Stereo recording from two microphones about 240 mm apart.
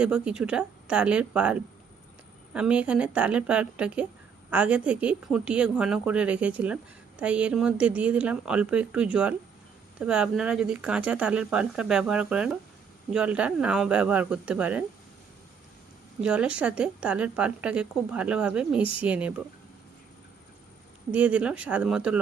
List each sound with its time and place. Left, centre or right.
0.0 s a woman's voice: centre
16.2 s a woman's voice: centre
18.8 s speech: left
19.0 s a woman's voice: centre
21.1 s a woman's voice: centre